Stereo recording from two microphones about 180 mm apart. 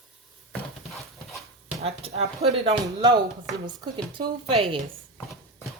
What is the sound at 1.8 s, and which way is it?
Speech, 35° right (ahead or behind).